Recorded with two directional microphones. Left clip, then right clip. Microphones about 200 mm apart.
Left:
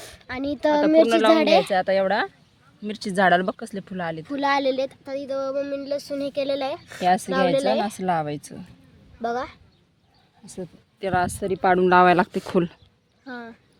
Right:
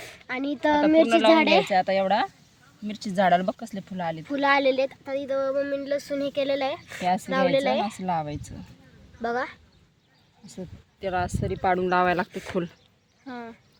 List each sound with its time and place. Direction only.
0.0 s a sound: 15° left (ahead or behind)
1.0 s speech: 50° left (ahead or behind)
1.3 s speech: 15° left (ahead or behind)
1.7 s speech: 45° left (ahead or behind)
4.3 s speech: 15° left (ahead or behind)
7.0 s speech: 45° left (ahead or behind)
7.5 s speech: 10° left (ahead or behind)
8.0 s speech: 45° left (ahead or behind)
9.2 s speech: 10° left (ahead or behind)
10.4 s speech: 50° left (ahead or behind)
13.2 s speech: 10° left (ahead or behind)